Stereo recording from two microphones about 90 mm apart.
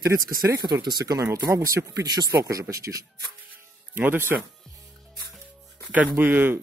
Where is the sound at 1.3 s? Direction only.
40° right (ahead or behind).